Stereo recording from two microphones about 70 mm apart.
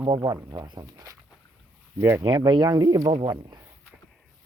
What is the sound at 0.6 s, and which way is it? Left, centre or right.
Speech, right.